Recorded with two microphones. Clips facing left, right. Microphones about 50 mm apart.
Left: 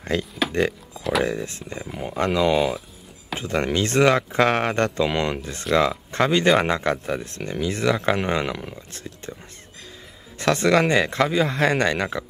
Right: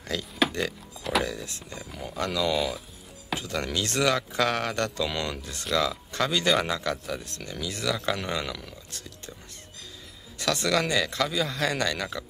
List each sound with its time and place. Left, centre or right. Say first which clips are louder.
0.1 s speech: left 4 dB; left
2.5 s speech: left 7 dB; centre
3.3 s speech: left 7 dB; left
10.4 s speech: left 7 dB; left